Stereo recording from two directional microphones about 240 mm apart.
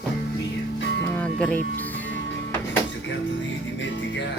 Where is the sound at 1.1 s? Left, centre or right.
Centre.